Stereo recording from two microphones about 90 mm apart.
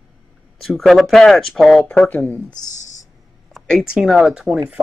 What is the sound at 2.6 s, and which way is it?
Speech, 50° left (ahead or behind).